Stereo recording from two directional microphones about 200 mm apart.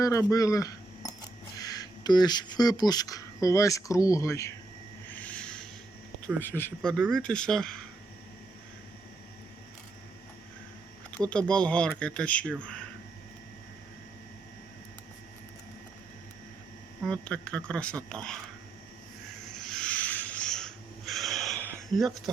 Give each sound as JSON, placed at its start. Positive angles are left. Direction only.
{"t": 0.0, "sound": "speech", "side_deg": 15}
{"t": 5.2, "sound": "a sound", "side_deg": 5}
{"t": 6.6, "sound": "speech", "side_deg": 5}
{"t": 11.3, "sound": "speech", "side_deg": 5}
{"t": 17.0, "sound": "speech", "side_deg": 5}
{"t": 19.5, "sound": "a sound", "side_deg": 5}